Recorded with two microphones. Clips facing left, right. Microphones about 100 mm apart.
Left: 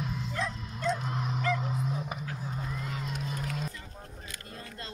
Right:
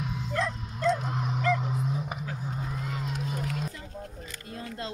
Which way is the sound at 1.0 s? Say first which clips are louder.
Right 2 dB; 15° right (ahead or behind).